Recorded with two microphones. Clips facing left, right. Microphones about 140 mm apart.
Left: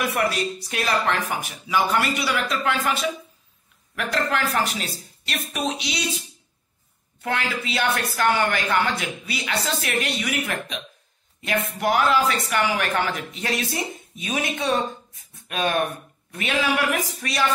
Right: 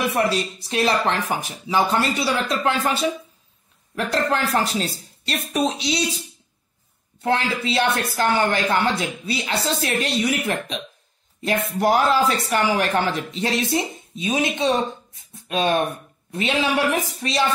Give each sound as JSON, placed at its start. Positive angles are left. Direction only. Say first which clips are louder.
{"t": 0.1, "sound": "speech", "louder": "right 2 dB", "side_deg": -25}
{"t": 7.2, "sound": "speech", "louder": "right 5 dB", "side_deg": -30}
{"t": 11.8, "sound": "speech", "louder": "right 2 dB", "side_deg": -35}